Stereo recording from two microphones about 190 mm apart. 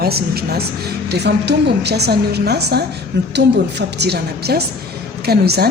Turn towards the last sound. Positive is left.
turn(degrees=-55)  # may be behind; listen again after turning